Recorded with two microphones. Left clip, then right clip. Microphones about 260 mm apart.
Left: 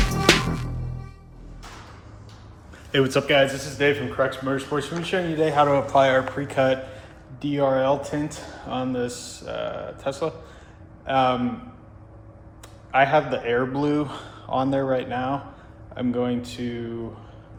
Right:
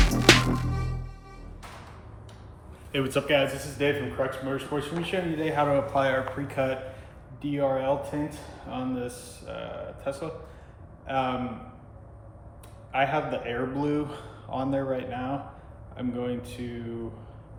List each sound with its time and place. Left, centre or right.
0.0 s music: centre
2.9 s a man's voice: left
12.9 s a man's voice: left